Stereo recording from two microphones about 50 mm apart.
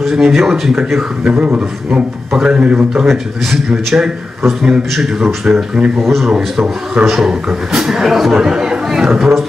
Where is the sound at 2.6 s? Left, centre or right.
Right.